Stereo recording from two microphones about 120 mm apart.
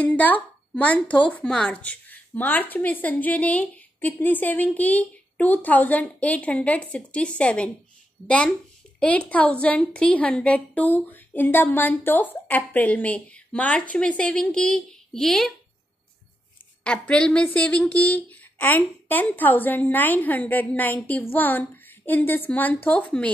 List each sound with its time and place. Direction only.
0.0 s a woman's voice: 10° left (ahead or behind)
16.8 s a woman's voice: 10° left (ahead or behind)